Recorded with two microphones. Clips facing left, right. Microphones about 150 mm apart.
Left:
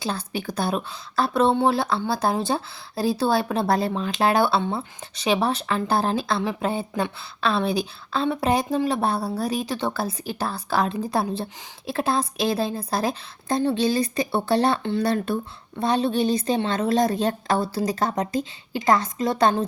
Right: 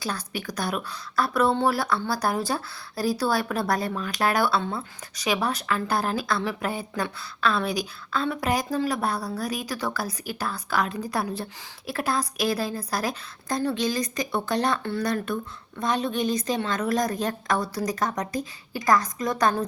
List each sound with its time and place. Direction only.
0.0 s speech: 25° left (ahead or behind)